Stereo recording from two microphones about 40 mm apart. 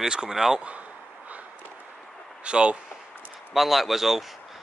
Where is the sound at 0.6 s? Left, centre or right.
Right.